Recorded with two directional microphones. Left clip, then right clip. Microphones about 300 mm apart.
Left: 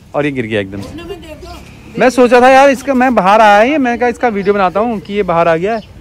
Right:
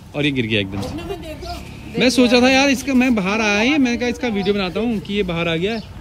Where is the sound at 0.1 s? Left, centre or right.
Centre.